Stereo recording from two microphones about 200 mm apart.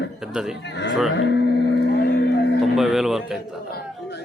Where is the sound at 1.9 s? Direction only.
60° left (ahead or behind).